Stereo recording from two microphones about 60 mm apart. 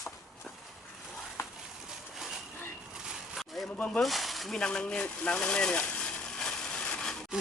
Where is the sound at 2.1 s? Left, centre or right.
Centre.